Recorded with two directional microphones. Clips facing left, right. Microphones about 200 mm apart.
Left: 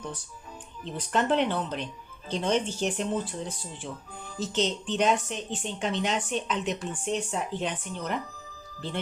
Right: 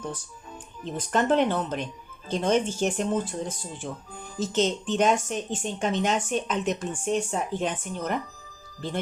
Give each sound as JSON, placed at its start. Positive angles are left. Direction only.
{"t": 0.9, "sound": "a woman's voice", "side_deg": -45}